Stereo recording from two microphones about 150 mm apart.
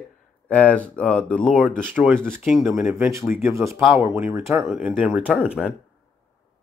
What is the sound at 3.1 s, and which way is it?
Speech, 15° right (ahead or behind).